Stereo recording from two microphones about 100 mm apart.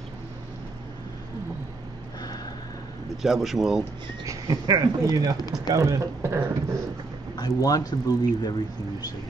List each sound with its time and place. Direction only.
3.2 s speech: centre (ahead or behind)
4.2 s a man's voice: 40° right (ahead or behind)
7.3 s speech: 40° left (ahead or behind)